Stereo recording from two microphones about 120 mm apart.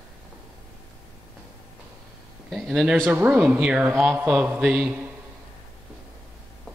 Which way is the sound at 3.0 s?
15° right (ahead or behind).